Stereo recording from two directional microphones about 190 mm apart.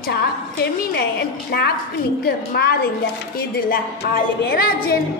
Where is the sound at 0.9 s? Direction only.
55° left (ahead or behind).